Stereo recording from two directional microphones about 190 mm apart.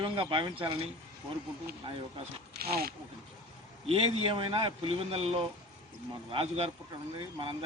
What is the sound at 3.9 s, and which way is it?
A man's voice, 30° right (ahead or behind).